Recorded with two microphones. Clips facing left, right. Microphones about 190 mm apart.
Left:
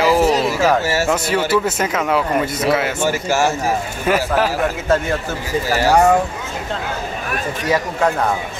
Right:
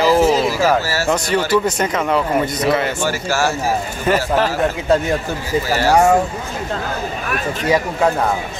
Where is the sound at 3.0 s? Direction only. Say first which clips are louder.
Left 2 dB; 20° left (ahead or behind).